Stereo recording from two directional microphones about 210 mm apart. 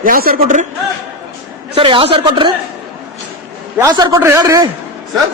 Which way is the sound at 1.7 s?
25° right (ahead or behind).